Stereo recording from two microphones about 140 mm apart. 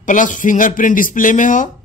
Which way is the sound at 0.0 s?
65° left (ahead or behind).